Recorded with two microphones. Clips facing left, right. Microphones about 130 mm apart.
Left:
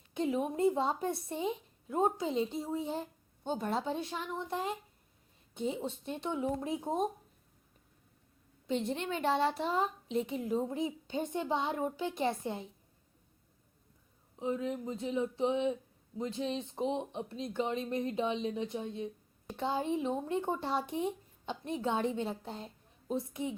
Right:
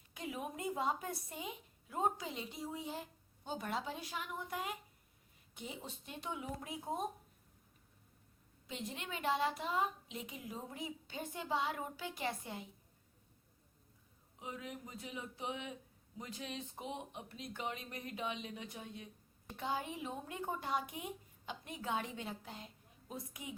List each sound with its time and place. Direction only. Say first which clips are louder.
0.1 s a woman's voice: left 11 dB; 25° left (ahead or behind)
8.6 s a woman's voice: left 11 dB; 30° left (ahead or behind)
14.3 s a woman's voice: left 12 dB; 30° left (ahead or behind)